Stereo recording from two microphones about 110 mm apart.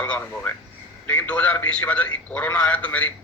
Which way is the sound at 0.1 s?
15° left (ahead or behind).